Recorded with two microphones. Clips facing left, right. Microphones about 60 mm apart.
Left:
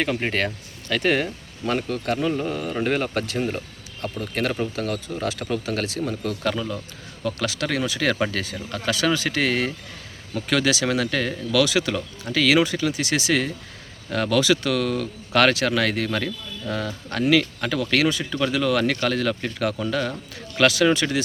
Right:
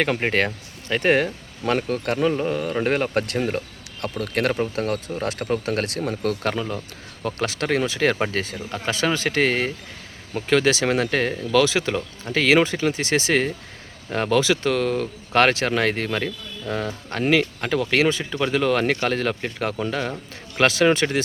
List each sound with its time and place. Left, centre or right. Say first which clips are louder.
0.0 s speech: right 3 dB; right
2.3 s speech: right 3 dB; right
2.8 s speech: even; right
6.5 s speech: right 1 dB; right
18.5 s speech: right 2 dB; right